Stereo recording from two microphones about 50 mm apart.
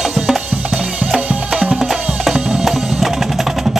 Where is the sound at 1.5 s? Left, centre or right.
Centre.